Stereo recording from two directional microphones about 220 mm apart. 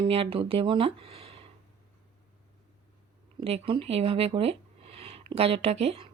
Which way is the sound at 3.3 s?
25° right (ahead or behind).